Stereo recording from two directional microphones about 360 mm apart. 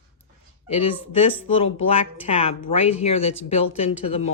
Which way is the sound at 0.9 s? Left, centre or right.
Centre.